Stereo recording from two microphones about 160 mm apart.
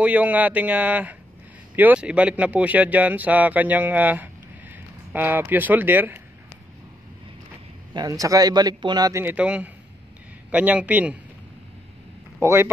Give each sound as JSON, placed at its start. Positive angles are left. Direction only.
{"t": 0.0, "sound": "speech", "side_deg": -10}
{"t": 7.9, "sound": "a man's voice", "side_deg": -20}
{"t": 9.2, "sound": "speech", "side_deg": -10}
{"t": 12.4, "sound": "a man's voice", "side_deg": -15}